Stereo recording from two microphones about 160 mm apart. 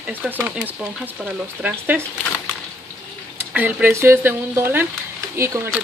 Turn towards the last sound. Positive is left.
turn(degrees=-15)  # may be behind; listen again after turning